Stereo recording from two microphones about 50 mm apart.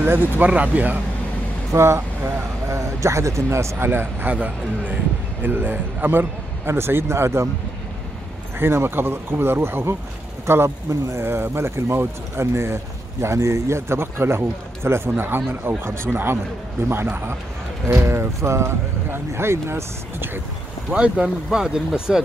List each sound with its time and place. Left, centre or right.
0.0 s speech: right
1.7 s speech: right
3.8 s a man's voice: right
8.5 s a man's voice: right
10.9 s speech: right
11.2 s speech: right
15.0 s a man's voice: right
17.8 s speech: right
19.0 s speech: right
20.9 s speech: right